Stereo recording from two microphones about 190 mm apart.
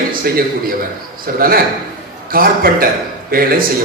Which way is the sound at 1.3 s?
50° right (ahead or behind).